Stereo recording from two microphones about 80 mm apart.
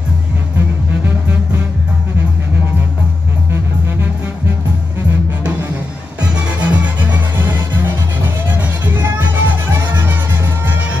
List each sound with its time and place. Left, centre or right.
6.2 s music: centre
10.7 s music: centre